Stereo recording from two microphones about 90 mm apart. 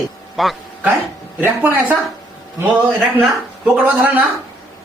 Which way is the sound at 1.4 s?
20° right (ahead or behind).